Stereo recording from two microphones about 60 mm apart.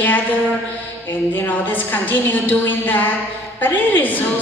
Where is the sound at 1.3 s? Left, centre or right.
Left.